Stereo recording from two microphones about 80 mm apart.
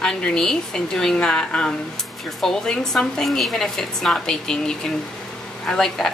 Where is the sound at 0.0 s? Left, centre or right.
Centre.